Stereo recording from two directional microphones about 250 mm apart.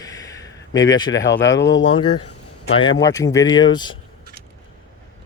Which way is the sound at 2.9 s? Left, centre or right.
Centre.